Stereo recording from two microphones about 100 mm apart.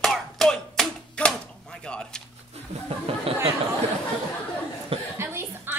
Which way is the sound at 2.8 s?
75° right (ahead or behind).